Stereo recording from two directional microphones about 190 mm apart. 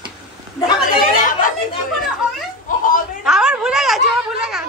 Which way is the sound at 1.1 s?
45° left (ahead or behind).